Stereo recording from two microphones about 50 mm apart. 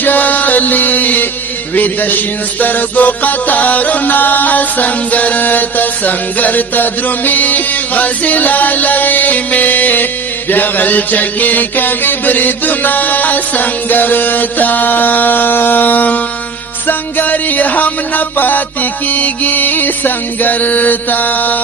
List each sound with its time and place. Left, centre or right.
0.0 s music: left